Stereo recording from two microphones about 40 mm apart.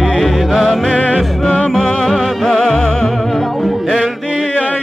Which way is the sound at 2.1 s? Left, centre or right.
Centre.